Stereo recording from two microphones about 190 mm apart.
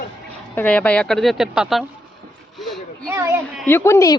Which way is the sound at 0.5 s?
10° left (ahead or behind).